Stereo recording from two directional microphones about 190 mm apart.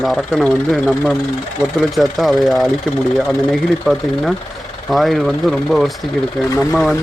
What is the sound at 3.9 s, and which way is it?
Speech, centre (ahead or behind).